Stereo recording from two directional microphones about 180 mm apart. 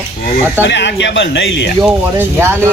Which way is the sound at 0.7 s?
75° left (ahead or behind).